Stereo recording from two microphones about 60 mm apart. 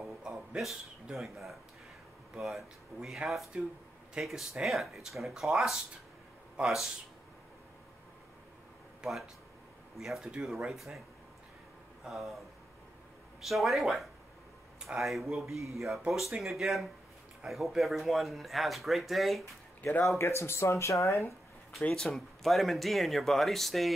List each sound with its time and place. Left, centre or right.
0.0 s a sound: centre
1.1 s speech: centre
9.0 s speech: centre
12.0 s speech: centre
20.2 s speech: left
21.8 s speech: centre
22.1 s speech: centre